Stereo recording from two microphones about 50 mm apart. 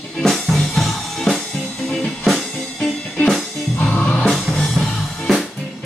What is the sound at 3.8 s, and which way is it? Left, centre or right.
Music, left.